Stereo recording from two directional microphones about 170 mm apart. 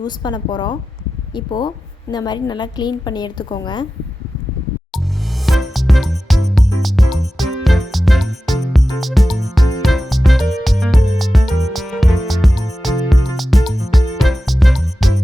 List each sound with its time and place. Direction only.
0.0 s a woman's voice: 25° left (ahead or behind)
5.5 s music: centre (ahead or behind)